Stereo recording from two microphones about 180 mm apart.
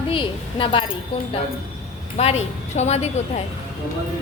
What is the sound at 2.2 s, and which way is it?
Speech, 35° left (ahead or behind).